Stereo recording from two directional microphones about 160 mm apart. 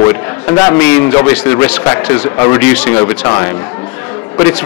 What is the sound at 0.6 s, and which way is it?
A man's voice, 15° left (ahead or behind).